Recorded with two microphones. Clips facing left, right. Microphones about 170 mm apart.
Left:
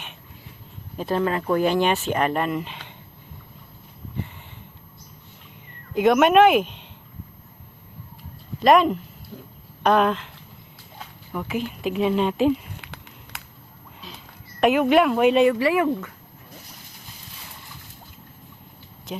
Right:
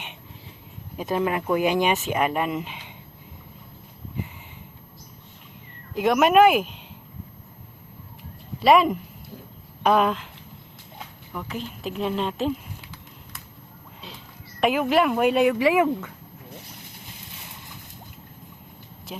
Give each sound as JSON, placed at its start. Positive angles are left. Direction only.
{"t": 0.9, "sound": "speech", "side_deg": -15}
{"t": 5.9, "sound": "speech", "side_deg": 0}
{"t": 8.6, "sound": "speech", "side_deg": -5}
{"t": 11.3, "sound": "speech", "side_deg": 5}
{"t": 12.8, "sound": "a sound", "side_deg": 70}
{"t": 14.6, "sound": "speech", "side_deg": 0}